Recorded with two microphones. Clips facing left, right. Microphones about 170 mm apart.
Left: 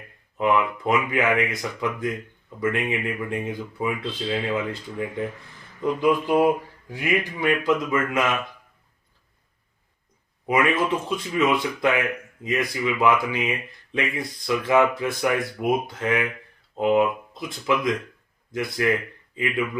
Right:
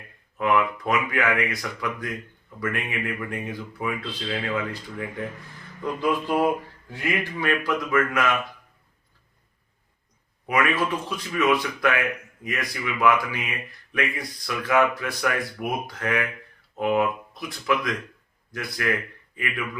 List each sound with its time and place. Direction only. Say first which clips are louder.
0.3 s speech: left 1 dB; 20° left (ahead or behind)
5.8 s a sound: left 4 dB; 15° left (ahead or behind)
6.9 s speech: left 3 dB; 15° left (ahead or behind)
10.4 s speech: left 2 dB; 20° left (ahead or behind)